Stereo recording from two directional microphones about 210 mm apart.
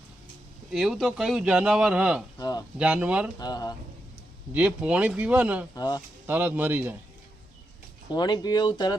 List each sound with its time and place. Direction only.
0.7 s speech: centre (ahead or behind)
2.4 s speech: 20° left (ahead or behind)
2.7 s speech: 5° right (ahead or behind)
3.3 s speech: 20° left (ahead or behind)
4.5 s speech: 5° right (ahead or behind)
5.7 s speech: 20° left (ahead or behind)
6.2 s speech: 10° right (ahead or behind)
8.1 s speech: 20° left (ahead or behind)